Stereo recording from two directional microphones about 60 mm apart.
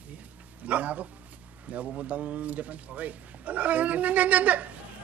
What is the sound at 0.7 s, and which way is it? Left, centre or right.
Speech, right.